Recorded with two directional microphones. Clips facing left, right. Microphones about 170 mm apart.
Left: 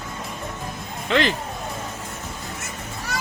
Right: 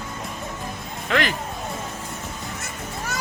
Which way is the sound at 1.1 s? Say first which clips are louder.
Left 2 dB; 25° left (ahead or behind).